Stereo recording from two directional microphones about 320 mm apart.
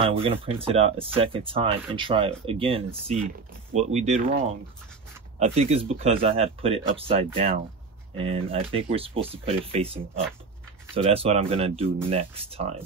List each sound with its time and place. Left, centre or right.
0.0 s speech: centre
5.4 s speech: centre
11.0 s speech: centre